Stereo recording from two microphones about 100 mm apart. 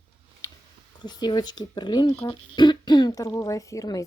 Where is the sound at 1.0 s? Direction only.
45° left (ahead or behind).